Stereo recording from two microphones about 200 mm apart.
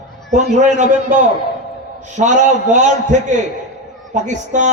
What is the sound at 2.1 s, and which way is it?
A man's voice, 35° right (ahead or behind).